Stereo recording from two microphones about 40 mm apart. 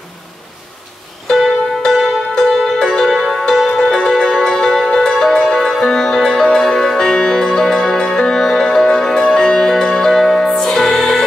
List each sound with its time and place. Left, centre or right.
2.0 s music: centre